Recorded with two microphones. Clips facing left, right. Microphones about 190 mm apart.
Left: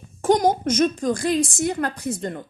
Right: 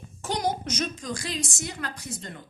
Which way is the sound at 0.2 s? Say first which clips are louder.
Left 10 dB; 50° left (ahead or behind).